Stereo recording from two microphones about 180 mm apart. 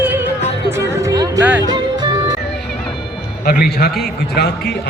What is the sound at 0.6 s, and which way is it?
Music, 15° right (ahead or behind).